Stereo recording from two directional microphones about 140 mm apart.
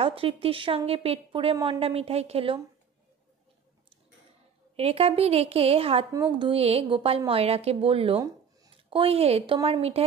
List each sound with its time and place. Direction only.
0.0 s a woman's voice: 40° right (ahead or behind)
4.7 s a woman's voice: 45° right (ahead or behind)
6.1 s a woman's voice: 30° right (ahead or behind)